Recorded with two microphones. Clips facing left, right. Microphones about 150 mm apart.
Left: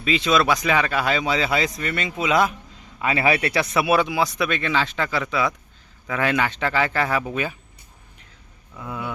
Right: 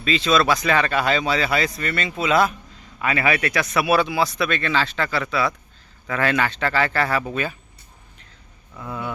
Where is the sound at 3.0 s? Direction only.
25° left (ahead or behind).